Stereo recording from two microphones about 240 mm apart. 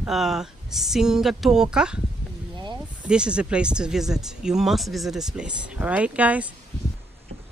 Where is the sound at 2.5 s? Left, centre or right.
Centre.